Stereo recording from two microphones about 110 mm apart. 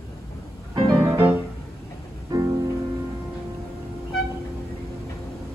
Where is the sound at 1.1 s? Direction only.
20° right (ahead or behind).